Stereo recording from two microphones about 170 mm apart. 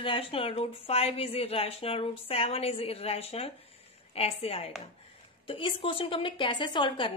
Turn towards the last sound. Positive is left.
turn(degrees=30)  # may be behind; listen again after turning